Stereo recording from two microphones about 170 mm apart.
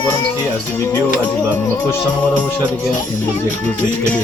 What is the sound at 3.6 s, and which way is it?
Speech, 10° left (ahead or behind).